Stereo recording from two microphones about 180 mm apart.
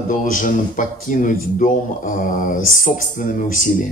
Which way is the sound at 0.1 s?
45° left (ahead or behind).